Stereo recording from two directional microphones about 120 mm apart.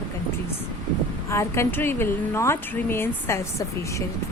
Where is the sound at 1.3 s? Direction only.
25° left (ahead or behind).